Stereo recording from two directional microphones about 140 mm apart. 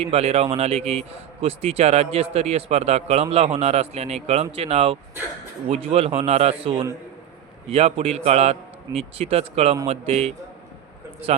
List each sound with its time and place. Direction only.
0.0 s a man's voice: 45° right (ahead or behind)